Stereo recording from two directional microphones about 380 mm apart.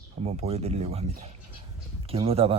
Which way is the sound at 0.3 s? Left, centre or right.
Centre.